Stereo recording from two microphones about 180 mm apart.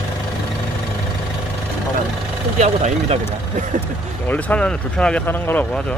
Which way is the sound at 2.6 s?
40° right (ahead or behind).